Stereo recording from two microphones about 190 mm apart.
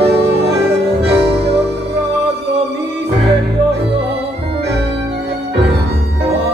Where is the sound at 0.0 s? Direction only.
60° right (ahead or behind).